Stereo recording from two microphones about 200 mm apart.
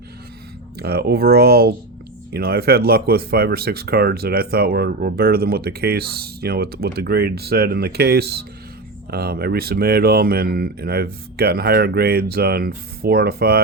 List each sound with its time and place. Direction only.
0.8 s speech: 50° right (ahead or behind)